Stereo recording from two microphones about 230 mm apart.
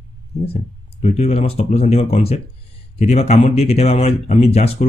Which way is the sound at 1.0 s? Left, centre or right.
Left.